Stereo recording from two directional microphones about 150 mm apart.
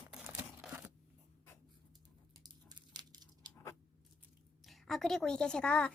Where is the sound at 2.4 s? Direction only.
25° right (ahead or behind).